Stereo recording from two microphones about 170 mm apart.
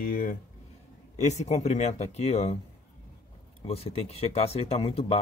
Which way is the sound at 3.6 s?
35° left (ahead or behind).